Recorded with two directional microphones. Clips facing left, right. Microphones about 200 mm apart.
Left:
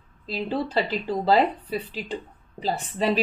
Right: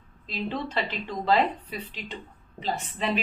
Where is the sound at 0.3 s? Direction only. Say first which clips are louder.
Left 4 dB; 35° left (ahead or behind).